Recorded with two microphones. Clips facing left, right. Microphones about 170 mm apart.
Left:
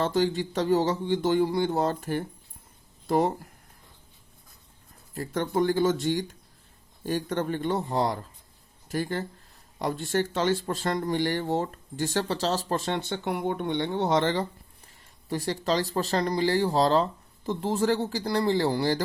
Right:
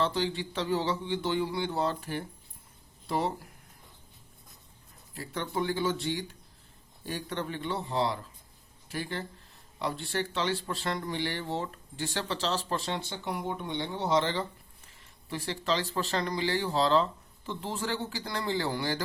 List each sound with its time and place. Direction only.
0.0 s speech: 45° left (ahead or behind)
5.1 s speech: 45° left (ahead or behind)